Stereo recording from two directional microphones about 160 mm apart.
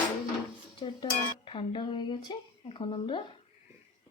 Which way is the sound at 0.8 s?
30° left (ahead or behind).